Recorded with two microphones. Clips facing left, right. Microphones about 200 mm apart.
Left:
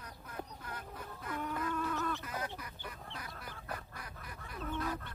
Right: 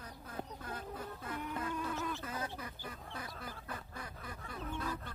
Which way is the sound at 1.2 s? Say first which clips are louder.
Left 3 dB; 25° right (ahead or behind).